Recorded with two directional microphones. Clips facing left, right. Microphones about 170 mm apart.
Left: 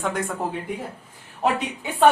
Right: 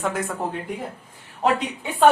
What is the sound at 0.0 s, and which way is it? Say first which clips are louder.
Speech: even; centre (ahead or behind).